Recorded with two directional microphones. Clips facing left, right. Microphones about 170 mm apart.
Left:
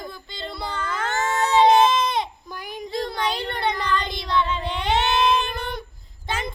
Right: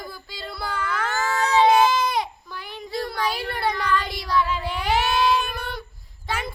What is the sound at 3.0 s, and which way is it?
Child singing, 20° left (ahead or behind).